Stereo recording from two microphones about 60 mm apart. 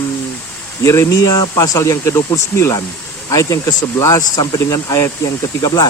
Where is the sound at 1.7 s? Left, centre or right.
Left.